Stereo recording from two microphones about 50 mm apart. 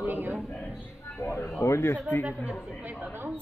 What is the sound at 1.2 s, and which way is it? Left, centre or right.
Speech, left.